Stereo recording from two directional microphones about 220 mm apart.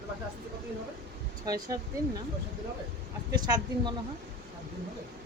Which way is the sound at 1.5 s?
15° right (ahead or behind).